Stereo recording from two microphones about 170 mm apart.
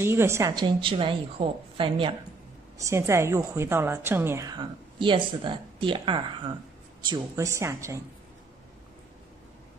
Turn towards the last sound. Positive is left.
turn(degrees=-15)  # may be behind; listen again after turning